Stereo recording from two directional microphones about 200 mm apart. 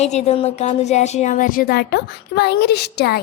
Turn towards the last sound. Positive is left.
turn(degrees=55)  # may be behind; listen again after turning